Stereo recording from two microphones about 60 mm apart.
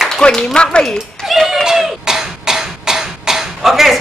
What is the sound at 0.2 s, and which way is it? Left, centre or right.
Speech, centre.